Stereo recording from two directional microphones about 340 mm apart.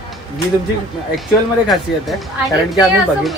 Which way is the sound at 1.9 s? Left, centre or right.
Centre.